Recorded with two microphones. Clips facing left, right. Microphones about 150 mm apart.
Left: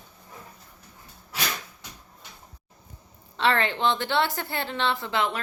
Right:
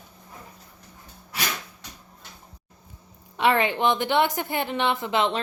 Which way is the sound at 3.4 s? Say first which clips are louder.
Right 3 dB; 15° right (ahead or behind).